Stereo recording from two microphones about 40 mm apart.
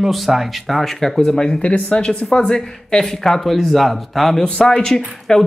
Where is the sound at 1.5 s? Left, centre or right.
Left; by 3.5 s centre.